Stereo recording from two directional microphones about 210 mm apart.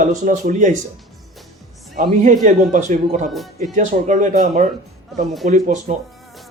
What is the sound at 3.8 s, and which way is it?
Speech, 35° right (ahead or behind).